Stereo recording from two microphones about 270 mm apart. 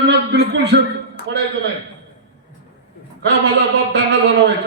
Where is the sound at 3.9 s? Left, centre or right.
Right.